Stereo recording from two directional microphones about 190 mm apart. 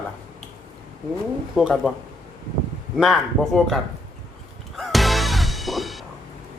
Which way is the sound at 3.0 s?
Centre (ahead or behind).